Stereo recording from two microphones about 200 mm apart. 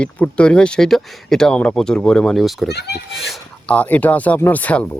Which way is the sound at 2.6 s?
55° left (ahead or behind).